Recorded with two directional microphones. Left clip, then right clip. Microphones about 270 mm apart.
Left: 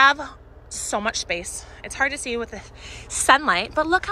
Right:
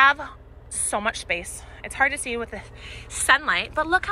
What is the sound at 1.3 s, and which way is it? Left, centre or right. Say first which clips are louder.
A woman's voice: even; centre.